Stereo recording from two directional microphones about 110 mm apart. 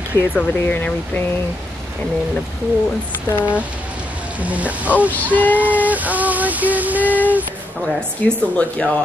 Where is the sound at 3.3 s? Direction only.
10° right (ahead or behind).